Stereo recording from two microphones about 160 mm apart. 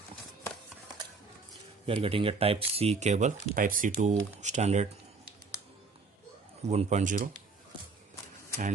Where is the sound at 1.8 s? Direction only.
35° right (ahead or behind).